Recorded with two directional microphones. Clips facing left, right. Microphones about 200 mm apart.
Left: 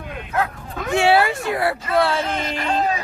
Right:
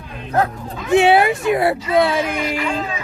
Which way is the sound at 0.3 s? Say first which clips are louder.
Right 4 dB; 35° right (ahead or behind).